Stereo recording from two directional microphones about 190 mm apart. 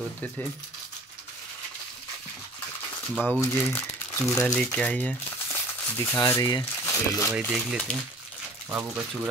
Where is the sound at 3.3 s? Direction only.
10° left (ahead or behind).